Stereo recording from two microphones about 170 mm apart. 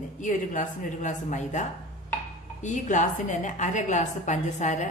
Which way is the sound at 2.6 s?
45° left (ahead or behind).